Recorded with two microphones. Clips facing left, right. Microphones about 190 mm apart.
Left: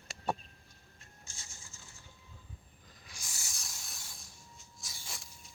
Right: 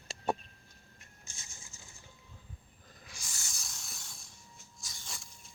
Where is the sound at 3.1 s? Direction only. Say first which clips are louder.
Even; centre (ahead or behind).